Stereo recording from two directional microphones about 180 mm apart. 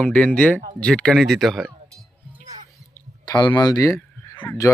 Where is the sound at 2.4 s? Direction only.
45° right (ahead or behind).